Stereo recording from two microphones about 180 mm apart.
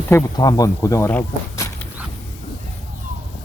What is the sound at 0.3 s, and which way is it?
Speech, 20° left (ahead or behind).